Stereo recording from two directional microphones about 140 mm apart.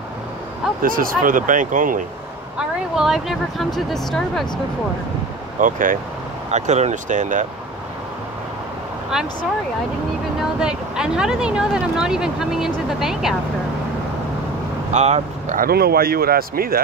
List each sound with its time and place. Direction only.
0.8 s speech: 90° right; by 2.0 s 70° right (ahead or behind)
2.5 s speech: 5° right (ahead or behind)
5.6 s speech: 70° right (ahead or behind)
6.5 s speech: 55° right (ahead or behind)
9.1 s speech: 5° right (ahead or behind)
10.6 s speech: 5° right (ahead or behind)
14.9 s speech: 50° right (ahead or behind)
15.5 s speech: 90° right